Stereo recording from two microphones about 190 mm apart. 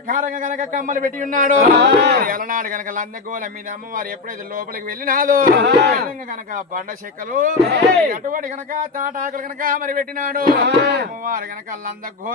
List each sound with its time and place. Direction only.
0.1 s speech: 45° right (ahead or behind); by 6.0 s 65° right (ahead or behind)
6.0 s speech: 45° right (ahead or behind)